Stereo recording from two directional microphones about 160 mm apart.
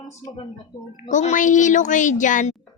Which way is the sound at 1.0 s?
50° left (ahead or behind).